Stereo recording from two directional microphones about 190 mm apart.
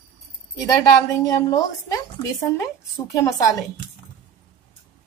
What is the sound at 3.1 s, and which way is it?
Speech, 15° left (ahead or behind).